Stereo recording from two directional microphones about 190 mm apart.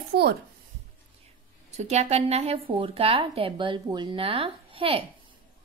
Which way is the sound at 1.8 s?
35° right (ahead or behind).